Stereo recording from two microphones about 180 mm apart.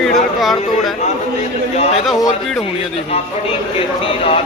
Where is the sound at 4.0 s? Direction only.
30° left (ahead or behind).